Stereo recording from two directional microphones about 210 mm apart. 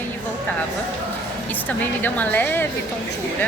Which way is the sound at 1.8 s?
10° left (ahead or behind).